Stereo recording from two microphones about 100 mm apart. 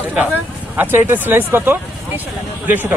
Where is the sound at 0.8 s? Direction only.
20° right (ahead or behind).